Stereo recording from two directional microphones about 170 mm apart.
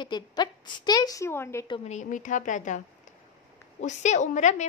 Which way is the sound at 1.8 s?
45° left (ahead or behind).